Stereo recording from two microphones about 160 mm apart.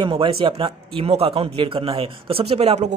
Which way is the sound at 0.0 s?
30° right (ahead or behind).